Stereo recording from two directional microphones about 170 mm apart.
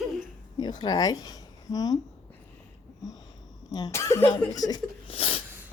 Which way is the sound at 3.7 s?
20° left (ahead or behind).